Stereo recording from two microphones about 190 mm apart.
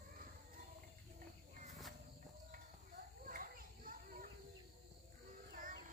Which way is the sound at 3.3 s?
45° right (ahead or behind).